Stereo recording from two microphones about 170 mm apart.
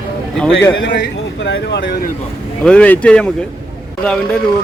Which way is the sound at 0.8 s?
90° left.